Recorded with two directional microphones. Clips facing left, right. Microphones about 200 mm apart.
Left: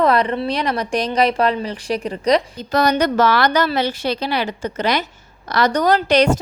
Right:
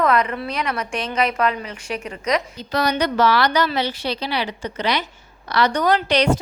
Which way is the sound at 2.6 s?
45° left (ahead or behind).